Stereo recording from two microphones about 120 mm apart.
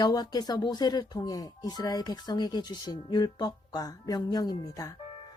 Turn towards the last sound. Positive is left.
turn(degrees=30)  # may be behind; listen again after turning